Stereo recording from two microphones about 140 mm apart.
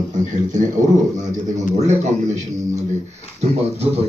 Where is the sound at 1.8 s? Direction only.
55° right (ahead or behind).